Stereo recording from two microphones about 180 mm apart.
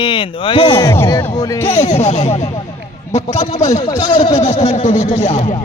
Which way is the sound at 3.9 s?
25° left (ahead or behind).